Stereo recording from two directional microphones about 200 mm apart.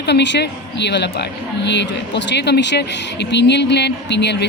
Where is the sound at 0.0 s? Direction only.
60° left (ahead or behind).